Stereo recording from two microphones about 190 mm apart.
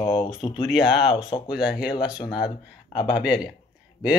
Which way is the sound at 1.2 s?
25° left (ahead or behind).